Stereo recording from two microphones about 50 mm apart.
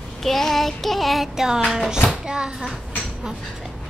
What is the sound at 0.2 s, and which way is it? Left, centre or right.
Child singing, centre.